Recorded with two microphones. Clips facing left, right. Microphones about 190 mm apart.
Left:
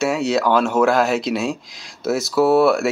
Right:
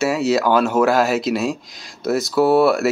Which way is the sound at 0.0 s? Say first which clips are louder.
Right 1 dB; centre (ahead or behind).